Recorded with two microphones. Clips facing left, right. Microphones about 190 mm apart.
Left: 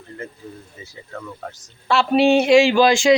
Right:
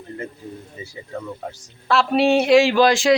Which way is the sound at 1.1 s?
15° right (ahead or behind).